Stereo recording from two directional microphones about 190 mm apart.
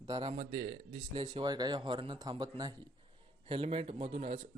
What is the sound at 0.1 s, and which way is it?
Speech, 30° right (ahead or behind).